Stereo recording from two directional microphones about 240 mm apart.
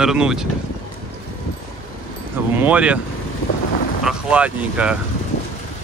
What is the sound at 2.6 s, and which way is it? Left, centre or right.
Speech, centre.